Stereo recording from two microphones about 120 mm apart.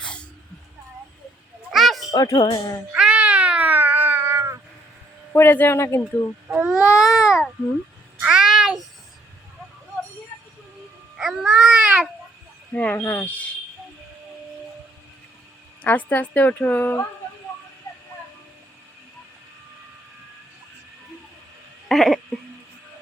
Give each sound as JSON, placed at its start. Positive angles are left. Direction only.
{"t": 1.7, "sound": "children playing", "side_deg": 0}
{"t": 2.0, "sound": "speech", "side_deg": 30}
{"t": 2.9, "sound": "cat", "side_deg": -10}
{"t": 5.3, "sound": "speech", "side_deg": 20}
{"t": 6.5, "sound": "speech", "side_deg": -5}
{"t": 7.0, "sound": "babbling", "side_deg": 0}
{"t": 8.2, "sound": "a sound", "side_deg": -5}
{"t": 11.2, "sound": "babbling", "side_deg": -5}
{"t": 12.7, "sound": "speech", "side_deg": 15}
{"t": 15.8, "sound": "speech", "side_deg": 15}
{"t": 21.8, "sound": "a sound", "side_deg": 0}